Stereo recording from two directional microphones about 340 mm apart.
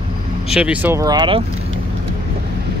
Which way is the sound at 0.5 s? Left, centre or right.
Centre.